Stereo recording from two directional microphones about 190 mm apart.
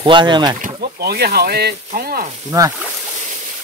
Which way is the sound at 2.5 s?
20° right (ahead or behind).